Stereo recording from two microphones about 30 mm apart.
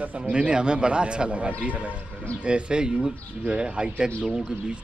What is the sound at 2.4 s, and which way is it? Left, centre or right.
Speech, right.